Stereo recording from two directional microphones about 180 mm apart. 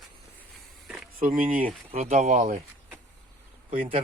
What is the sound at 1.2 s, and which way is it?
Speech, 50° right (ahead or behind).